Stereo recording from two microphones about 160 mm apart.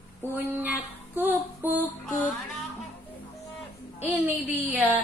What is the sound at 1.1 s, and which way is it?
Speech, 10° right (ahead or behind).